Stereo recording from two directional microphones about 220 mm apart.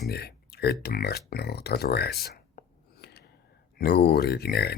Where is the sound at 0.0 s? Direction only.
45° left (ahead or behind).